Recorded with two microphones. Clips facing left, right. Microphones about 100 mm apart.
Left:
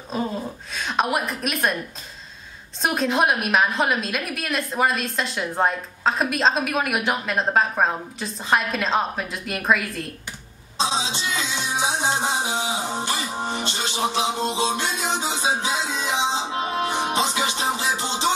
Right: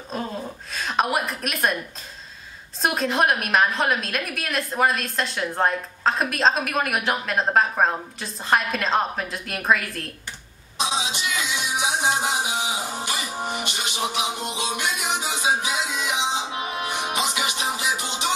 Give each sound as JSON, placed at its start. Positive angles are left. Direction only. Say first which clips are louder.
{"t": 0.1, "sound": "a woman's voice", "louder": "left 3 dB", "side_deg": 0}
{"t": 2.8, "sound": "a woman's voice", "louder": "left 1 dB", "side_deg": 0}
{"t": 10.8, "sound": "music", "louder": "left 2 dB", "side_deg": 25}